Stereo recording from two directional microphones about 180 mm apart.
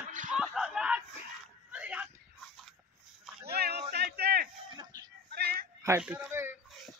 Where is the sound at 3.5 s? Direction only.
60° right (ahead or behind).